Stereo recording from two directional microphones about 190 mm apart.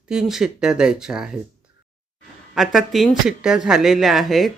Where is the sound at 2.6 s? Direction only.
Centre (ahead or behind).